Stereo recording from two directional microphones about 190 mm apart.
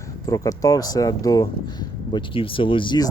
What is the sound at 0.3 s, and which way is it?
Speech, 20° left (ahead or behind).